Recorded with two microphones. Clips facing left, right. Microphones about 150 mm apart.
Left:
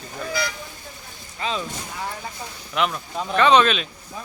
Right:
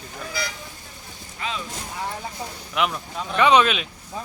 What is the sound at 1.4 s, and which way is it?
Speech, 35° left (ahead or behind).